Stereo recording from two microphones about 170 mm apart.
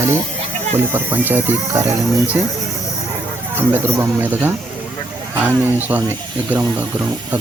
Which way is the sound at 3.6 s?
10° right (ahead or behind).